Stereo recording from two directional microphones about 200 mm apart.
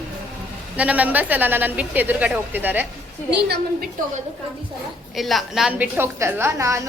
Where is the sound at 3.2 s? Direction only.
55° right (ahead or behind).